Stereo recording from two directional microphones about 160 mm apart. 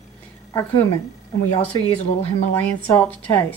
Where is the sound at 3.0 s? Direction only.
10° left (ahead or behind).